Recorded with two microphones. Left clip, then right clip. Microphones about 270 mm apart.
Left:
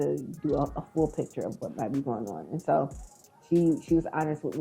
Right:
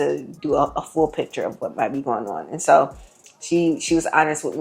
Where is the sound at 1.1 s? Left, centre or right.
Centre.